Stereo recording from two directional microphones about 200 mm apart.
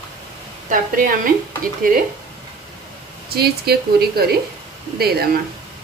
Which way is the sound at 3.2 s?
50° right (ahead or behind).